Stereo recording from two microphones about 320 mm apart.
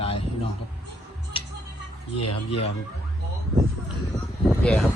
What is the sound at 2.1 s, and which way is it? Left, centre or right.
Speech, left.